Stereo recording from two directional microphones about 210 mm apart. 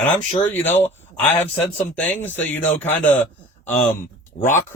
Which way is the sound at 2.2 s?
10° left (ahead or behind).